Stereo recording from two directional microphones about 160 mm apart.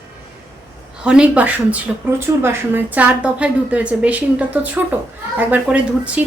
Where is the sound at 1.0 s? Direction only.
5° right (ahead or behind).